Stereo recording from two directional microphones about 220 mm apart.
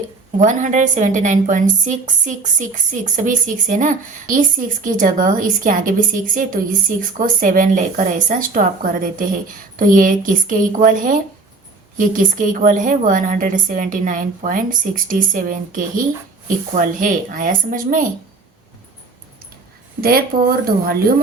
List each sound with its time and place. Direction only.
0.3 s a woman's voice: 35° right (ahead or behind)
20.0 s speech: 45° right (ahead or behind)